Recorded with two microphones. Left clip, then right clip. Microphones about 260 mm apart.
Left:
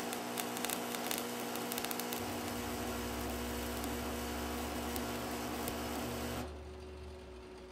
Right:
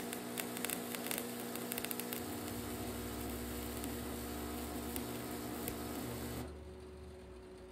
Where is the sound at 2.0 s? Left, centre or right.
Centre.